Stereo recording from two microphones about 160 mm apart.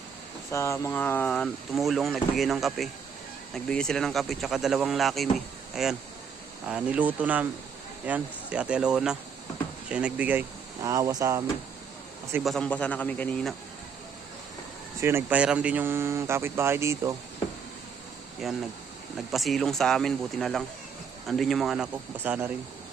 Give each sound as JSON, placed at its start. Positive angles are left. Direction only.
{"t": 0.5, "sound": "speech", "side_deg": 20}
{"t": 12.4, "sound": "a man's voice", "side_deg": 0}
{"t": 15.0, "sound": "speech", "side_deg": -10}
{"t": 18.4, "sound": "speech", "side_deg": 0}